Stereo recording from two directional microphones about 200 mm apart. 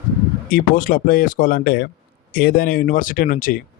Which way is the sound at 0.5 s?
45° left (ahead or behind).